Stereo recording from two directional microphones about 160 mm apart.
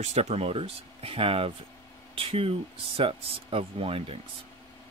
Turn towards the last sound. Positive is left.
turn(degrees=-35)  # may be behind; listen again after turning